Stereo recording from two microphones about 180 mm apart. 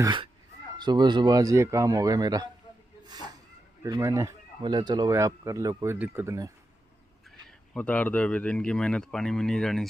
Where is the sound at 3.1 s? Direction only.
20° right (ahead or behind).